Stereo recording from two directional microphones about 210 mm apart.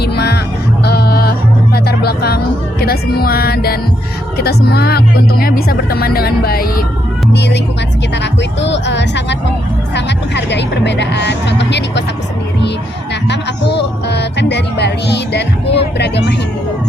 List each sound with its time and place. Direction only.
0.0 s music: 50° left (ahead or behind)
2.8 s speech: 45° left (ahead or behind)
13.2 s music: 55° left (ahead or behind)